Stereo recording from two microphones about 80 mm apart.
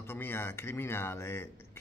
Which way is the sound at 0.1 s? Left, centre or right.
Left.